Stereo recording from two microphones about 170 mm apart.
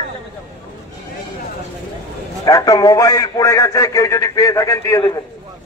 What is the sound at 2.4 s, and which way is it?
A man's voice, 20° left (ahead or behind).